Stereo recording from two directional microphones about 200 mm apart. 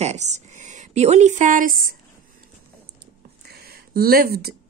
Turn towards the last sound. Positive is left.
turn(degrees=-50)  # may be behind; listen again after turning